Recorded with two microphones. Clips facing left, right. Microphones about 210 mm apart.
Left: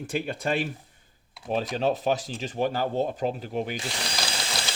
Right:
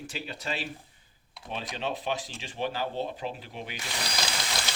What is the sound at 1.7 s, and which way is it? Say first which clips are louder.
Speech: left 6 dB; 40° left (ahead or behind).